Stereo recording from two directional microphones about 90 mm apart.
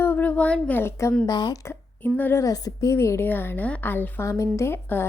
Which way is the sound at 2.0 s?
20° left (ahead or behind).